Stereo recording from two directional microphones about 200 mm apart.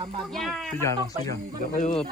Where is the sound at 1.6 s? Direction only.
40° left (ahead or behind).